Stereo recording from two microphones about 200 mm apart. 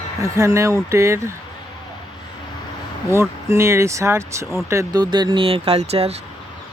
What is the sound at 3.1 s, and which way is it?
Speech, 15° right (ahead or behind).